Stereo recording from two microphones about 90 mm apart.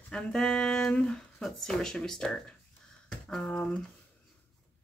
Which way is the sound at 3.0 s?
5° left (ahead or behind).